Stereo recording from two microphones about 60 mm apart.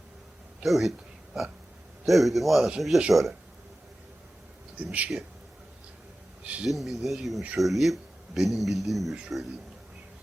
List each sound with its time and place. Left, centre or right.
0.6 s speech: centre
4.8 s speech: right
6.4 s speech: right
6.7 s speech: centre